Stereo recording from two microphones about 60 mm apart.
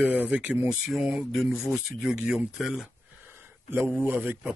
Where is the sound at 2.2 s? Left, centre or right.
Centre.